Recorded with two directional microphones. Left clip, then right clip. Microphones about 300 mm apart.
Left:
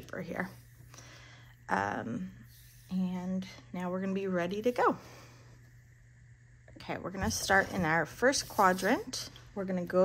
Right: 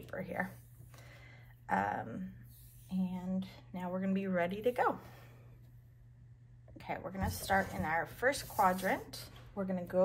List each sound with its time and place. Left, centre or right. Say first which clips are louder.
0.0 s a sound: left 1 dB; centre
2.9 s speech: left 3 dB; left
6.8 s speech: left 3 dB; centre